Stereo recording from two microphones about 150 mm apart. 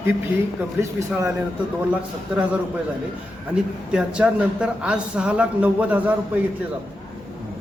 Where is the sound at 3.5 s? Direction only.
5° right (ahead or behind).